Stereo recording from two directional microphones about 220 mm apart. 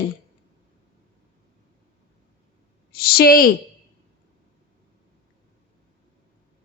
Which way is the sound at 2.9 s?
45° left (ahead or behind).